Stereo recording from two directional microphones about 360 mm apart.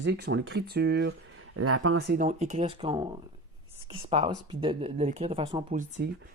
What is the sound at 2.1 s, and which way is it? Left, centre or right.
Speech, centre.